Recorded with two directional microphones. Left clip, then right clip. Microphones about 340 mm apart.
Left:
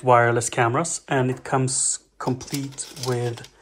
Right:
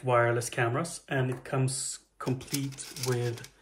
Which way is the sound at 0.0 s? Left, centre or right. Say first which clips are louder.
Left 9 dB; centre.